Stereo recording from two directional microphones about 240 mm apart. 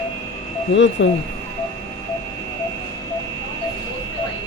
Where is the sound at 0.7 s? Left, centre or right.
Left.